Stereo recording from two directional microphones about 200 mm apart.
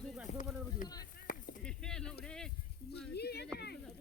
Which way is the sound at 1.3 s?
45° left (ahead or behind).